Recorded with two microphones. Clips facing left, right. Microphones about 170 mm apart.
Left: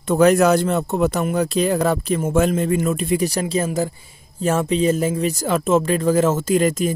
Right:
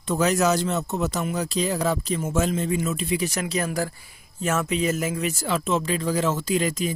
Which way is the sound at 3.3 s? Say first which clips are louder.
Left 5 dB; 30° left (ahead or behind).